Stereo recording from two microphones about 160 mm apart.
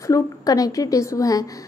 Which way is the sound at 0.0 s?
20° left (ahead or behind).